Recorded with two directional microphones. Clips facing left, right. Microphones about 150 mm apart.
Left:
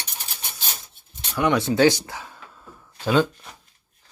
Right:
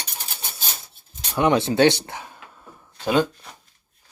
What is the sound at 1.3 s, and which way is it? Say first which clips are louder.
Speech: right 2 dB; 25° right (ahead or behind).